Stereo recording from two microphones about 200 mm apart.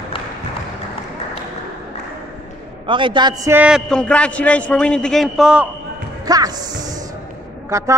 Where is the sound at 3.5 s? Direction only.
5° right (ahead or behind).